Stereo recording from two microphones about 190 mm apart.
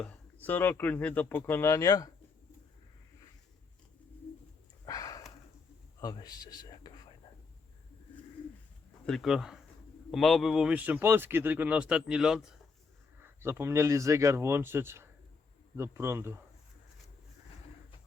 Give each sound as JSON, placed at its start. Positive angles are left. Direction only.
{"t": 0.4, "sound": "speech", "side_deg": 10}
{"t": 4.9, "sound": "sniff", "side_deg": 20}
{"t": 6.0, "sound": "whispering", "side_deg": 20}
{"t": 9.0, "sound": "a man's voice", "side_deg": 0}
{"t": 13.1, "sound": "speech", "side_deg": -15}